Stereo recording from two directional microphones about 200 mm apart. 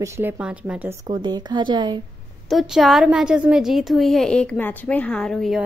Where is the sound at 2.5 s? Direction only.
Centre (ahead or behind).